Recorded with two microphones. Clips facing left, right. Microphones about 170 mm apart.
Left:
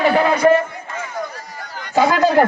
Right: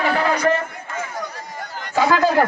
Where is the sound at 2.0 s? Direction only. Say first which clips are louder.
Left 2 dB; 20° left (ahead or behind).